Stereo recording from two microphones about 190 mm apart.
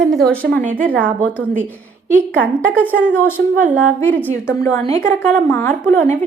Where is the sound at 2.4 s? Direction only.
10° right (ahead or behind).